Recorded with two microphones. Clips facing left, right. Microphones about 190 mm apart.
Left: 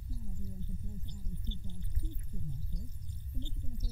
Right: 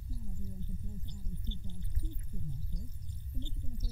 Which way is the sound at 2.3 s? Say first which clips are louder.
Even; 10° left (ahead or behind).